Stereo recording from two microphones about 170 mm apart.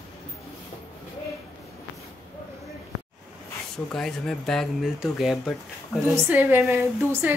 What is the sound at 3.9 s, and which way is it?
Speech, 5° left (ahead or behind).